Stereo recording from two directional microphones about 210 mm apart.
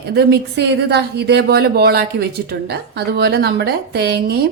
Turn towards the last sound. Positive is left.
turn(degrees=-50)  # may be behind; listen again after turning